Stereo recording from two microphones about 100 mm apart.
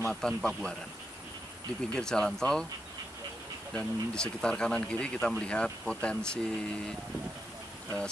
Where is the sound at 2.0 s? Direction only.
5° left (ahead or behind).